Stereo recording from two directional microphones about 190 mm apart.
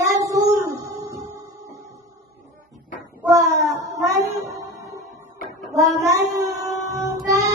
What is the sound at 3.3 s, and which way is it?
Child singing, 15° right (ahead or behind).